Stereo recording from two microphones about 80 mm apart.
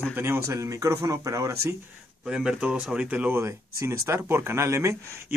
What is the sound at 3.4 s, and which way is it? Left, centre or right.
A man's voice, right.